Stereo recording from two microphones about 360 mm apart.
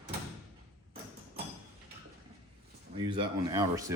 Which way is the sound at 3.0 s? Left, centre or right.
Centre.